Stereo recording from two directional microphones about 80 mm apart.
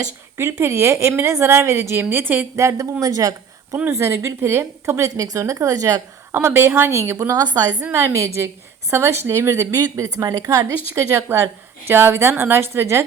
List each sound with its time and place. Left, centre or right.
0.6 s a woman's voice: right
2.6 s a woman's voice: right
3.8 s a woman's voice: right
6.3 s a woman's voice: right
7.2 s a woman's voice: right
7.9 s a woman's voice: right
10.9 s a woman's voice: right